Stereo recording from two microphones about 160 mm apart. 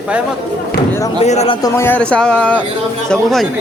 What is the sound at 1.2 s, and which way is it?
Speech, 45° left (ahead or behind).